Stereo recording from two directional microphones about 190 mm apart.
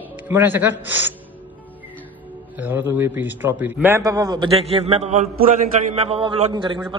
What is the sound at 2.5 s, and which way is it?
A man's voice, 10° right (ahead or behind).